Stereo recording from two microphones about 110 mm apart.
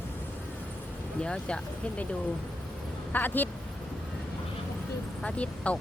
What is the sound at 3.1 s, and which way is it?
Speech, 15° left (ahead or behind).